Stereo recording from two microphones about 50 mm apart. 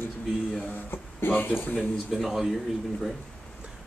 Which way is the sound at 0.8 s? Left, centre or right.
Left.